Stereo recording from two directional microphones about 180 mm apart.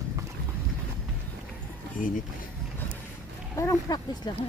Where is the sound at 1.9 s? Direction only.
45° left (ahead or behind).